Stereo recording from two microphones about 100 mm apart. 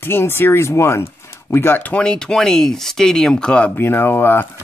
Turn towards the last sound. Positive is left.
turn(degrees=20)  # may be behind; listen again after turning